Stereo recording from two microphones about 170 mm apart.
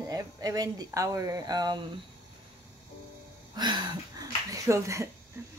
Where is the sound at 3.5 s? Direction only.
25° right (ahead or behind).